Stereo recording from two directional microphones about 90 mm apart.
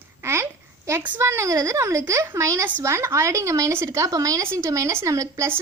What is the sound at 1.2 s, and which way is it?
A woman's voice, 35° right (ahead or behind).